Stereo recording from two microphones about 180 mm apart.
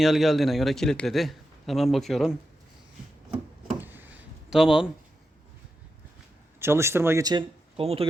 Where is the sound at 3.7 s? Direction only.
10° right (ahead or behind).